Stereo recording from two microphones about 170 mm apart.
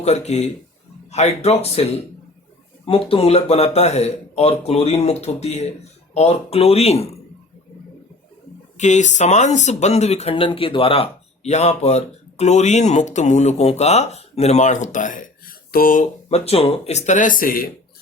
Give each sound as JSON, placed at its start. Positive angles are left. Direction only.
{"t": 0.0, "sound": "speech", "side_deg": 40}
{"t": 8.8, "sound": "speech", "side_deg": 45}